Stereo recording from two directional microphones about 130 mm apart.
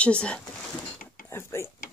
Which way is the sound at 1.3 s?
20° left (ahead or behind).